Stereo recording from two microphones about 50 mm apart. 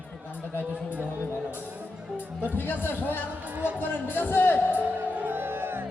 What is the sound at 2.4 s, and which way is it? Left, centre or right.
Speech, left.